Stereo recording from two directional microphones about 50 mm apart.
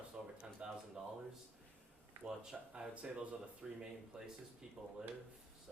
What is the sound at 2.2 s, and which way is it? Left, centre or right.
Speech, centre.